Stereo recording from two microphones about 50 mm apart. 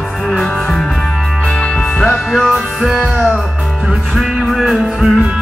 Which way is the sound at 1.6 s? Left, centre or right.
Centre.